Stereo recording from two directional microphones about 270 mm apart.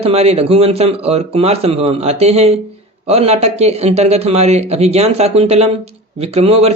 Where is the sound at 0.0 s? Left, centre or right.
Right.